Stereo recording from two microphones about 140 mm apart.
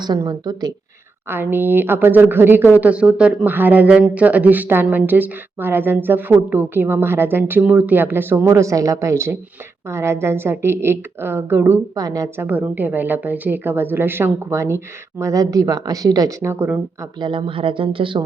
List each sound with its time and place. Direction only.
0.0 s speech: 30° right (ahead or behind)
1.3 s speech: 15° right (ahead or behind)
12.5 s speech: 10° right (ahead or behind)
17.2 s speech: 35° right (ahead or behind)